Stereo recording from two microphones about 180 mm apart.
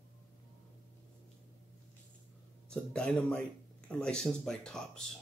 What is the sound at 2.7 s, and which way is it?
Speech, 5° left (ahead or behind).